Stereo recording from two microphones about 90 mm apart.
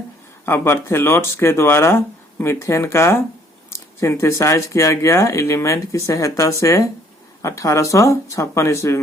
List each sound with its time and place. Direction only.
0.4 s speech: 25° left (ahead or behind)